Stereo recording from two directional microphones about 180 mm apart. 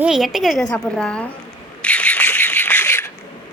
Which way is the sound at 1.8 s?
5° left (ahead or behind).